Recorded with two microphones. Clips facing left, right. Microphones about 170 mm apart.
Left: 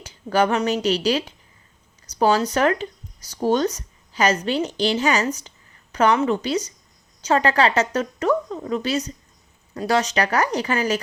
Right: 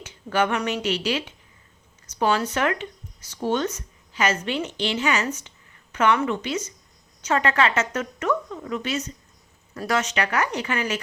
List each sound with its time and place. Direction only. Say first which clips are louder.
0.0 s speech: left 3 dB; 35° left (ahead or behind)